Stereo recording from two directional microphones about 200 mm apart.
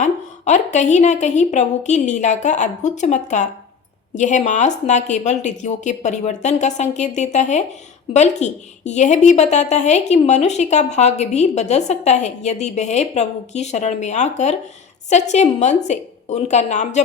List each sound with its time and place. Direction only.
0.0 s a woman's voice: 35° left (ahead or behind)